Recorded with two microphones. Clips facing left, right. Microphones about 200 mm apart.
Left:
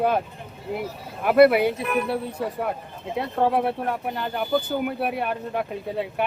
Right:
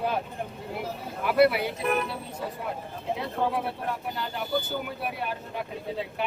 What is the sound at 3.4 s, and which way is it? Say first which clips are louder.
Speech: left 9 dB; 55° left (ahead or behind).